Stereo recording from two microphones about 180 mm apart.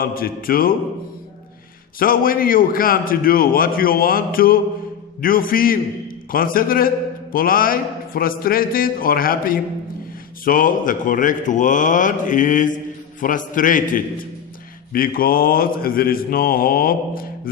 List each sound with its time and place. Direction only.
0.0 s a man's voice: 55° left (ahead or behind)
2.0 s a man's voice: 50° left (ahead or behind)